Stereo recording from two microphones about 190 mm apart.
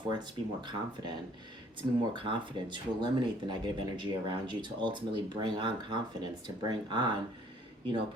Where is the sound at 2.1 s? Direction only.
25° right (ahead or behind).